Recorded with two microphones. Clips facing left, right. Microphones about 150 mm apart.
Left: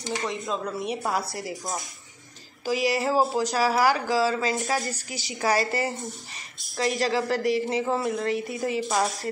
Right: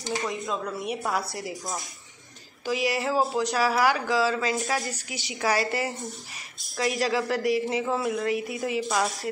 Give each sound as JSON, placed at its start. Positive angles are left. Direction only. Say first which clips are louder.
{"t": 0.0, "sound": "speech", "louder": "even", "side_deg": 0}
{"t": 2.7, "sound": "speech", "louder": "left 2 dB", "side_deg": 0}
{"t": 8.8, "sound": "speech", "louder": "left 2 dB", "side_deg": 20}